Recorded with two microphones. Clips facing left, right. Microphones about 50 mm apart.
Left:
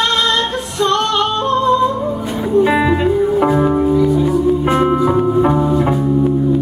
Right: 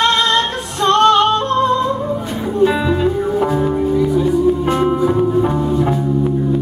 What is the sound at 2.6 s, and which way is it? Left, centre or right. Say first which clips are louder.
Music: left 1 dB; left.